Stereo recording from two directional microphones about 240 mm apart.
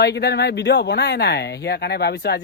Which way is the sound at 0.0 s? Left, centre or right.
Left.